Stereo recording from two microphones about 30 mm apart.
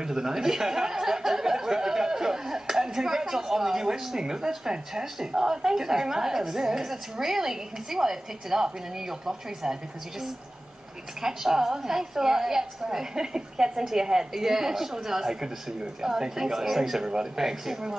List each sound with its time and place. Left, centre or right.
0.0 s speech: centre
11.1 s speech: centre